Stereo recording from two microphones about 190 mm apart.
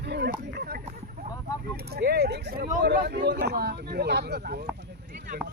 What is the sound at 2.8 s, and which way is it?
Speech, 60° right (ahead or behind).